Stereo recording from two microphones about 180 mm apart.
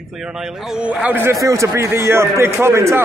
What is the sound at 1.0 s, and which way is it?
A man's voice, 10° right (ahead or behind).